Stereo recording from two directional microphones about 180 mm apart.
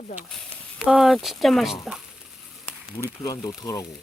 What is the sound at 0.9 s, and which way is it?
Speech, centre (ahead or behind).